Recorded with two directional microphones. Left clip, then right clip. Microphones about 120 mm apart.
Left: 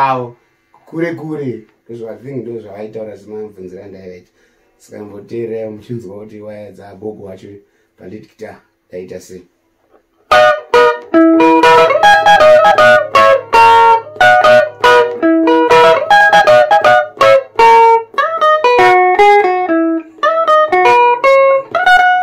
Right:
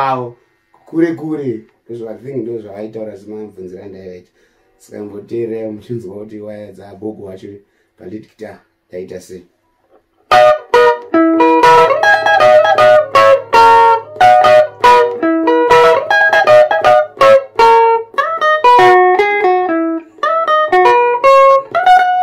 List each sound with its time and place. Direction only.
3.3 s speech: 5° right (ahead or behind)
5.2 s speech: 10° right (ahead or behind)
10.2 s music: 40° left (ahead or behind)
14.2 s music: 40° left (ahead or behind)